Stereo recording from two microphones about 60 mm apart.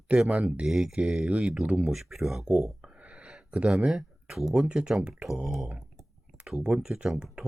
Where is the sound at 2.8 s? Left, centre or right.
Centre.